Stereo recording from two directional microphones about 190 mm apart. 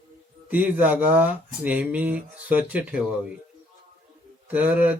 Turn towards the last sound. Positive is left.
turn(degrees=-10)  # may be behind; listen again after turning